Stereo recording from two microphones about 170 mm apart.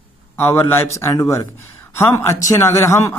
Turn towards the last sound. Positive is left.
turn(degrees=15)  # may be behind; listen again after turning